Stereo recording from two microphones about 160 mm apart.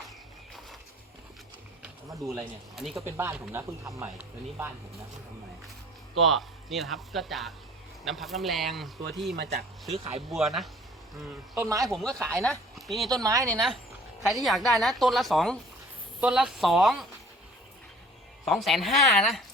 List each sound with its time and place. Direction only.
2.7 s speech: centre (ahead or behind)
3.0 s speech: 15° right (ahead or behind)
6.2 s speech: centre (ahead or behind)
9.3 s speech: 80° right
9.9 s speech: 40° right (ahead or behind)
10.2 s speech: centre (ahead or behind)
11.5 s speech: 20° right (ahead or behind)
12.3 s speech: centre (ahead or behind)
13.1 s speech: 25° right (ahead or behind)
13.5 s speech: centre (ahead or behind)
18.4 s speech: centre (ahead or behind)